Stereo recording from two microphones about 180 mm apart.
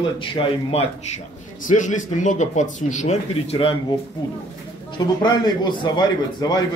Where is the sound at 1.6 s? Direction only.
45° left (ahead or behind).